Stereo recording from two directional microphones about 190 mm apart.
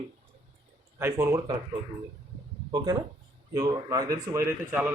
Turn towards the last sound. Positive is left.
turn(degrees=-10)  # may be behind; listen again after turning